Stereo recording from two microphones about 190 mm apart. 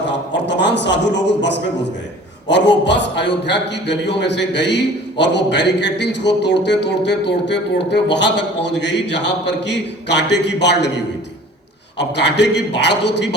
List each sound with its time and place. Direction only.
0.1 s a man's voice: 65° left (ahead or behind)